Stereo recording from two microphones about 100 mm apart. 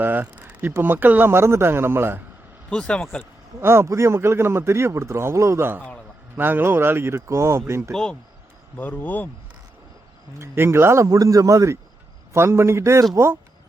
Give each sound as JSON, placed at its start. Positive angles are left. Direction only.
{"t": 0.0, "sound": "speech", "side_deg": -20}
{"t": 2.6, "sound": "speech", "side_deg": 10}
{"t": 3.6, "sound": "speech", "side_deg": -25}
{"t": 8.7, "sound": "speech", "side_deg": 20}
{"t": 10.3, "sound": "speech", "side_deg": -25}